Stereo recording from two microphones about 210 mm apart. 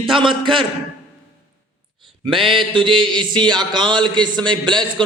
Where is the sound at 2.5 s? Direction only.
25° right (ahead or behind).